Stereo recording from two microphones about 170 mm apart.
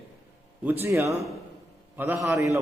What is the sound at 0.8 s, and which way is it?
A man's voice, 15° right (ahead or behind).